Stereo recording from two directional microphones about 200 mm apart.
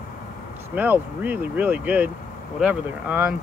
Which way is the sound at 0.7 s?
10° right (ahead or behind).